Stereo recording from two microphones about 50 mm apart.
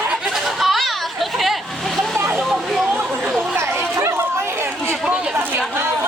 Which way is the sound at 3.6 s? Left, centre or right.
Right.